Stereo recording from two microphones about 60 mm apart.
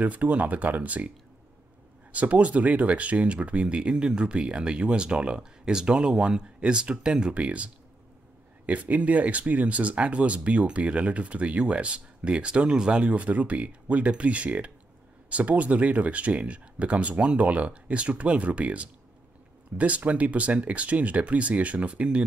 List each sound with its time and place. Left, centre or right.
0.0 s speech: right
2.1 s speech: right